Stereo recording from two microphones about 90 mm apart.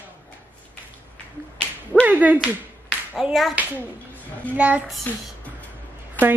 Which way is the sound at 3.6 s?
15° right (ahead or behind).